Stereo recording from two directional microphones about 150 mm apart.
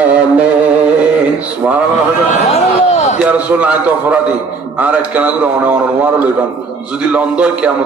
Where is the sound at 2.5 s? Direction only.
45° left (ahead or behind).